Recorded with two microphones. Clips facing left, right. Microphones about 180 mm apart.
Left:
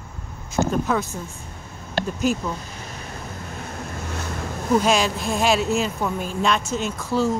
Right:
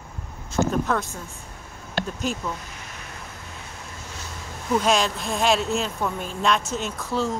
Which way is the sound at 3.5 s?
50° left (ahead or behind).